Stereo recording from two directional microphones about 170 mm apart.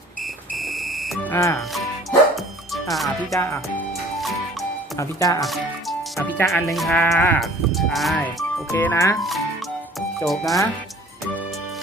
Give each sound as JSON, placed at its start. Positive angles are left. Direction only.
{"t": 0.5, "sound": "music", "side_deg": 0}
{"t": 1.3, "sound": "speech", "side_deg": 15}
{"t": 1.5, "sound": "music", "side_deg": 0}
{"t": 3.3, "sound": "speech", "side_deg": 15}
{"t": 4.9, "sound": "speech", "side_deg": 20}
{"t": 5.4, "sound": "speech", "side_deg": 0}
{"t": 6.1, "sound": "speech", "side_deg": 15}
{"t": 6.5, "sound": "speech", "side_deg": 0}
{"t": 7.4, "sound": "speech", "side_deg": 0}
{"t": 8.7, "sound": "speech", "side_deg": 15}
{"t": 10.2, "sound": "speech", "side_deg": 0}